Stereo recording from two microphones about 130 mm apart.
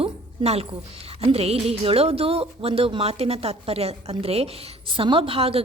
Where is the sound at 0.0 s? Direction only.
50° right (ahead or behind).